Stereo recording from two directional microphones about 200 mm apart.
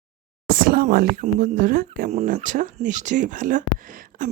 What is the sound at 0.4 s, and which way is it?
Speech, 45° right (ahead or behind).